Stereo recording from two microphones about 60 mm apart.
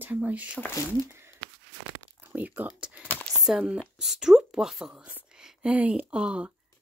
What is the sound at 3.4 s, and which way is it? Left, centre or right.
Speech, centre.